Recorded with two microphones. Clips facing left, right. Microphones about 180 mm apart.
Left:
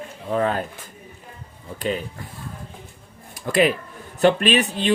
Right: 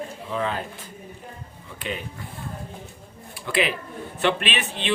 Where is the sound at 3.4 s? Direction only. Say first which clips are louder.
Left 6 dB; 45° left (ahead or behind).